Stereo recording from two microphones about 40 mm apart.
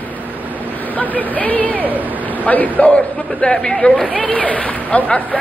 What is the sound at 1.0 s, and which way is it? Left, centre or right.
A man's voice, left.